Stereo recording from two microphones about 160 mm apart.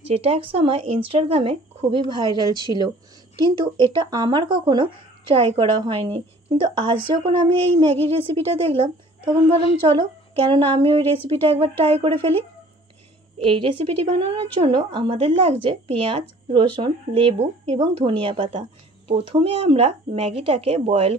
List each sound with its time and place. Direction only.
0.0 s speech: 40° right (ahead or behind)
9.9 s speech: 30° right (ahead or behind)
13.4 s speech: 35° right (ahead or behind)